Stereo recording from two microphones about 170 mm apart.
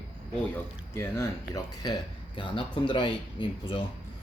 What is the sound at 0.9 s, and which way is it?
Speech, 15° left (ahead or behind).